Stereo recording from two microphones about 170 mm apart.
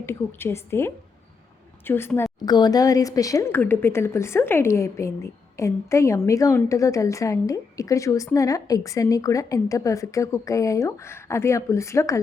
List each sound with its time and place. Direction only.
0.0 s a woman's voice: 15° left (ahead or behind)
2.4 s speech: 25° left (ahead or behind)